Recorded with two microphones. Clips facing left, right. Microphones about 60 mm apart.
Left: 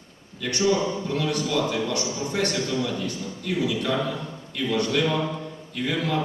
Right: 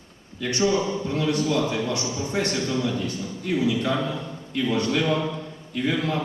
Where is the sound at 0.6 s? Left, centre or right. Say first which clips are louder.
Even; right.